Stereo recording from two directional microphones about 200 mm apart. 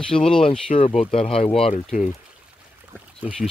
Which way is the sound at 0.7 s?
35° left (ahead or behind).